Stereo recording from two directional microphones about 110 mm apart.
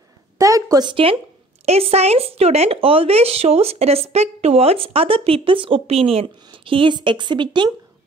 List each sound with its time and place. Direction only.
0.4 s a sound: 30° right (ahead or behind)
0.8 s a woman's voice: 55° right (ahead or behind)
1.7 s a woman's voice: 70° right (ahead or behind); by 7.7 s 45° right (ahead or behind)